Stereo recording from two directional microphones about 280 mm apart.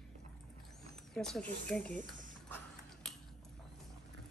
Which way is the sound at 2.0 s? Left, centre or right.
Right.